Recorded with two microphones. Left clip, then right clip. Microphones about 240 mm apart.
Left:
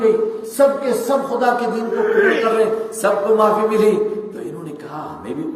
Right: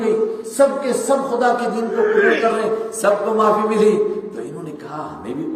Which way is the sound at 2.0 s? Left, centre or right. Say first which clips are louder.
Even; centre.